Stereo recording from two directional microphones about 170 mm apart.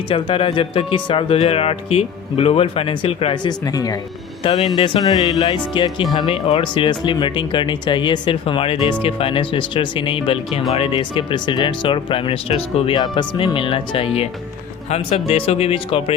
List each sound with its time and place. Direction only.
0.1 s speech: 30° left (ahead or behind)
3.7 s speech: 20° left (ahead or behind)